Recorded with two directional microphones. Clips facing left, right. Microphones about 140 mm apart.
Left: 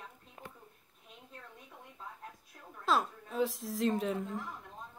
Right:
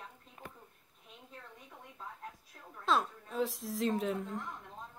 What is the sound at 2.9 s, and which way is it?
A woman's voice, centre (ahead or behind).